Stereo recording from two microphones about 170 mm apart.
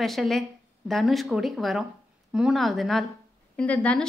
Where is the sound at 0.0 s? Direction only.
Centre (ahead or behind).